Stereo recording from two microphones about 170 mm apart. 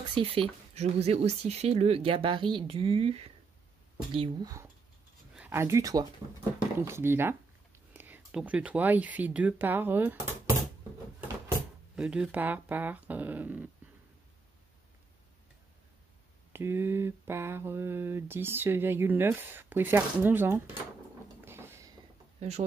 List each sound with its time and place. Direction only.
0.1 s speech: 35° right (ahead or behind)
5.3 s speech: 10° right (ahead or behind)
6.8 s mantra: 15° right (ahead or behind)
7.9 s speech: 10° right (ahead or behind)
11.9 s speech: 5° right (ahead or behind)
16.5 s mantra: 15° right (ahead or behind)
21.5 s a sound: 15° right (ahead or behind)
22.4 s speech: 40° right (ahead or behind)